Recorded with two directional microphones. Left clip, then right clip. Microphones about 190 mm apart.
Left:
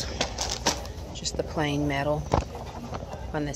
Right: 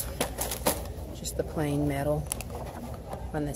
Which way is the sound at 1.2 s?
5° right (ahead or behind).